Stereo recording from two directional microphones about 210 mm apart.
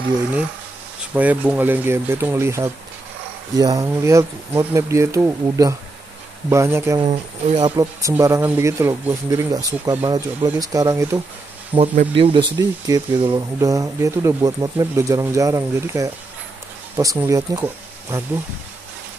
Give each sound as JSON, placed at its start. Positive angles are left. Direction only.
{"t": 1.1, "sound": "speech", "side_deg": -10}
{"t": 7.1, "sound": "speech", "side_deg": -30}
{"t": 7.6, "sound": "speech", "side_deg": -15}
{"t": 11.9, "sound": "speech", "side_deg": -30}